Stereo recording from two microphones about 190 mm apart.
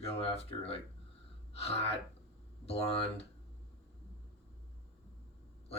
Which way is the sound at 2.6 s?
30° left (ahead or behind).